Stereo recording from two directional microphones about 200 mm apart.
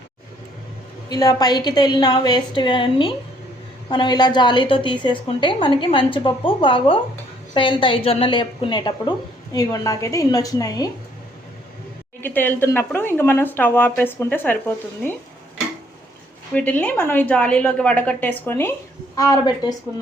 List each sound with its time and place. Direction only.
1.1 s a woman's voice: 20° left (ahead or behind)
12.2 s speech: 10° left (ahead or behind)
16.6 s speech: 5° left (ahead or behind)